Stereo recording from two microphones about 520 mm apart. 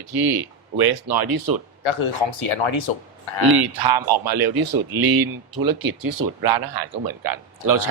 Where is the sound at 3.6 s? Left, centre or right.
Right.